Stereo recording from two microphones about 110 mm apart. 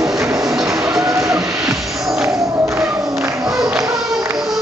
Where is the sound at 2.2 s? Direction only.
20° right (ahead or behind).